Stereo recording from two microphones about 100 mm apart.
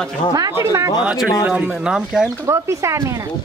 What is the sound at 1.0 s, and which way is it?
Speech, 10° right (ahead or behind).